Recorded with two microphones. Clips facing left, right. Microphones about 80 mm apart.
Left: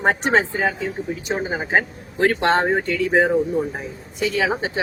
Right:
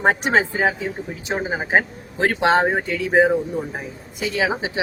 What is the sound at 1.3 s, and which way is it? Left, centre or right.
Speech, centre.